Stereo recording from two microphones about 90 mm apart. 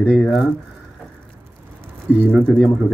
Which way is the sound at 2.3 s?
5° left (ahead or behind).